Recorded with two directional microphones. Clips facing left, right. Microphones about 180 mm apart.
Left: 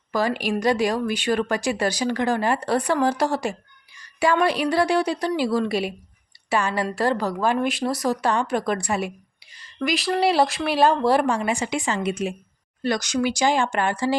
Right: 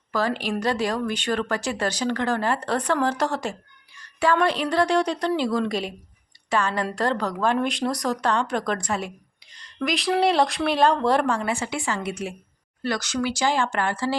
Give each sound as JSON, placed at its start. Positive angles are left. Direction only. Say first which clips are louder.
{"t": 0.1, "sound": "a woman's voice", "louder": "left 2 dB", "side_deg": 15}